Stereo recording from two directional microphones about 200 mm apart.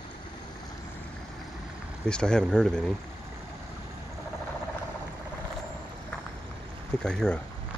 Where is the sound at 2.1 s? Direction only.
5° left (ahead or behind).